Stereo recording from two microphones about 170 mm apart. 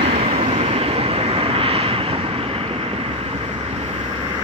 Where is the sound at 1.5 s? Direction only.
35° right (ahead or behind).